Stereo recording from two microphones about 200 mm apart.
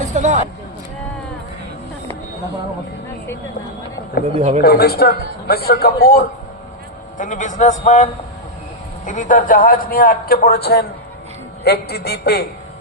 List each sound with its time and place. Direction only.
0.0 s a sound: 35° right (ahead or behind)
4.4 s speech: 30° right (ahead or behind)
4.6 s a man's voice: 50° left (ahead or behind)